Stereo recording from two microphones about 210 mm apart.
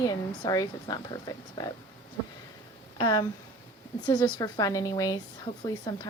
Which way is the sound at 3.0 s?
20° left (ahead or behind).